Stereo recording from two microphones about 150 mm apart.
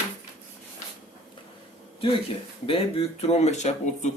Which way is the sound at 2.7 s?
40° left (ahead or behind).